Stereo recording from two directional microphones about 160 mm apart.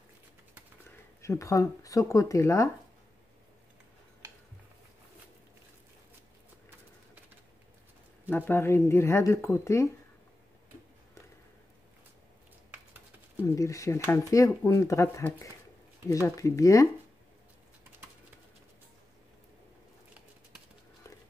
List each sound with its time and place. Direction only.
1.2 s speech: 20° left (ahead or behind)
8.3 s speech: 10° left (ahead or behind)
13.4 s speech: 20° left (ahead or behind)